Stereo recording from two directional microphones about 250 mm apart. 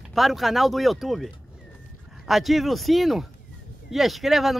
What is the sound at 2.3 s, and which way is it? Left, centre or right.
Speech, centre.